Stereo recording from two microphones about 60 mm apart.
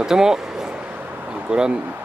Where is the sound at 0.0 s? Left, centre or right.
Centre; by 1.4 s right.